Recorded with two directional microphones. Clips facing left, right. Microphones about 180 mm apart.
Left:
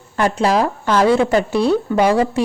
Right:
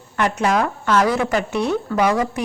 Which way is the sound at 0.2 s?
30° left (ahead or behind).